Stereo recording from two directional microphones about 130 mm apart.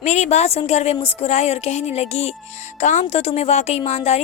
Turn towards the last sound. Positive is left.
turn(degrees=55)  # may be behind; listen again after turning